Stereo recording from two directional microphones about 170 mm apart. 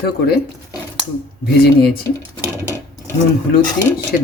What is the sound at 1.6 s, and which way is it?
Speech, 65° left (ahead or behind).